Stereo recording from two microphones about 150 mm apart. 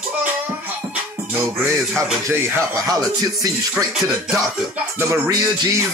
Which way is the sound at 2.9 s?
25° right (ahead or behind).